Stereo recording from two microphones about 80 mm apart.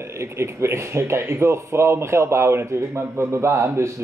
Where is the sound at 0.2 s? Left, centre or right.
Right.